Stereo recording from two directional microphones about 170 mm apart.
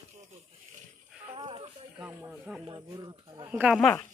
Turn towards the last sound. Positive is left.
turn(degrees=0)  # may be behind; listen again after turning